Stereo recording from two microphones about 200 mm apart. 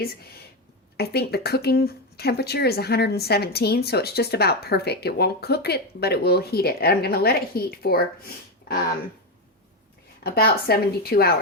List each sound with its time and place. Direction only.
0.9 s speech: 55° left (ahead or behind)
10.2 s speech: 50° left (ahead or behind)